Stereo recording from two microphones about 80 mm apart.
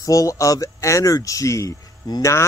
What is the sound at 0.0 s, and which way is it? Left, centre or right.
Speech, left.